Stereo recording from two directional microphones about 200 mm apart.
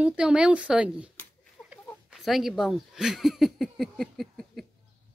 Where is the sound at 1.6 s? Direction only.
10° left (ahead or behind).